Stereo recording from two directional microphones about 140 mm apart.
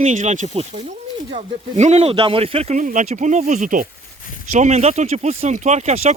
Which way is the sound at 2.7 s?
60° right (ahead or behind).